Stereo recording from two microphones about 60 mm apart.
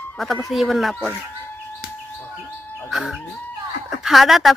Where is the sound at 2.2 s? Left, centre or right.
Left.